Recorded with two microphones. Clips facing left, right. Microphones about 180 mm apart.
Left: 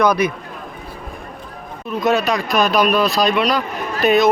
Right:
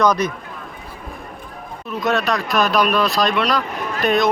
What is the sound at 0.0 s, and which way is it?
Speech, 10° left (ahead or behind).